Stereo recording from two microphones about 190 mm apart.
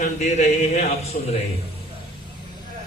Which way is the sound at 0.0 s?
35° left (ahead or behind).